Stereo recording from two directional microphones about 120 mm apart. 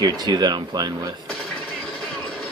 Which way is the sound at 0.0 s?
35° right (ahead or behind).